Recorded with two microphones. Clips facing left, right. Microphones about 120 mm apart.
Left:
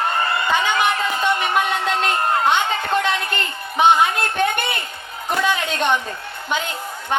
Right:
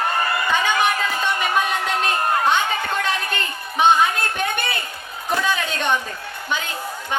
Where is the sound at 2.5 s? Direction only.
20° left (ahead or behind).